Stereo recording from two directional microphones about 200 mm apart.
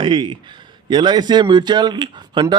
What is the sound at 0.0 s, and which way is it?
A man's voice, 25° right (ahead or behind).